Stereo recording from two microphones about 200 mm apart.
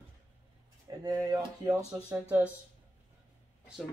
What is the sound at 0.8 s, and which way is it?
Speech, 20° right (ahead or behind).